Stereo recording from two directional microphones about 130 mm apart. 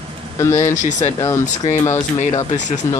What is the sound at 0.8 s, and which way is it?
Speech, 65° left (ahead or behind).